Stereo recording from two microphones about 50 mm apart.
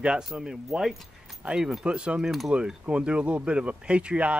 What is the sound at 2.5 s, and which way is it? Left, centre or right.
Speech, right.